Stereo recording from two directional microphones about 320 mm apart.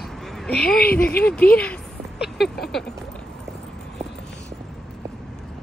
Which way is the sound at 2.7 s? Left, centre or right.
Centre.